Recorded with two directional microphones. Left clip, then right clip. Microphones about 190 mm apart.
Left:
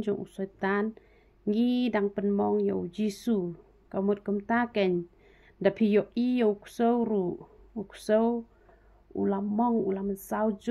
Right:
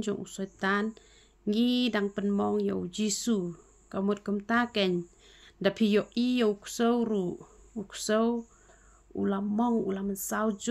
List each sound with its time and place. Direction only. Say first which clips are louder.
0.0 s speech: left 3 dB; 20° right (ahead or behind)